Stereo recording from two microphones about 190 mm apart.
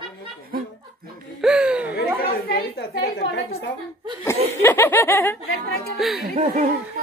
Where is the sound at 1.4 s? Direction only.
5° right (ahead or behind).